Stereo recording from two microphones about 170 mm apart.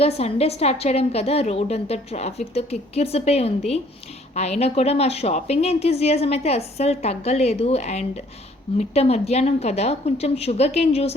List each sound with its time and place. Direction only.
0.0 s a woman's voice: 35° left (ahead or behind)